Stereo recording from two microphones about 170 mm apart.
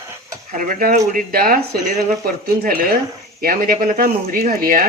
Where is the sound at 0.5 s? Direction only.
55° right (ahead or behind).